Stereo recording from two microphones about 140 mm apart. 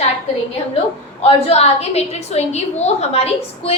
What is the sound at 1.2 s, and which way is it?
A woman's voice, 45° left (ahead or behind).